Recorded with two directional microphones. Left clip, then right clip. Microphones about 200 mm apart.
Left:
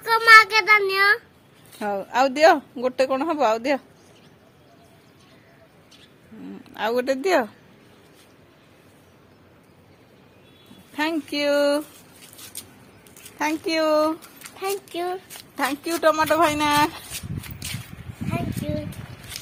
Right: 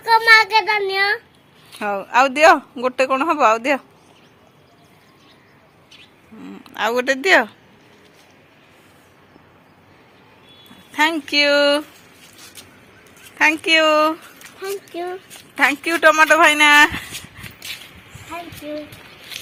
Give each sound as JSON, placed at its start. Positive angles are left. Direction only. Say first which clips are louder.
{"t": 0.1, "sound": "child singing", "louder": "right 1 dB", "side_deg": 20}
{"t": 1.8, "sound": "speech", "louder": "right 5 dB", "side_deg": 0}
{"t": 6.7, "sound": "speech", "louder": "right 4 dB", "side_deg": 0}
{"t": 10.9, "sound": "speech", "louder": "right 8 dB", "side_deg": 0}
{"t": 13.4, "sound": "speech", "louder": "right 8 dB", "side_deg": -5}
{"t": 14.9, "sound": "speech", "louder": "even", "side_deg": 25}
{"t": 15.5, "sound": "speech", "louder": "right 8 dB", "side_deg": -20}